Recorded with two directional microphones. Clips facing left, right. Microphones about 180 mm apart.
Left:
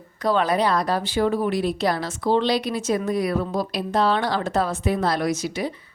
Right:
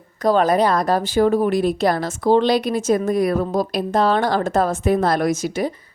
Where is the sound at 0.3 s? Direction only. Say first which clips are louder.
Right 4 dB; 45° right (ahead or behind).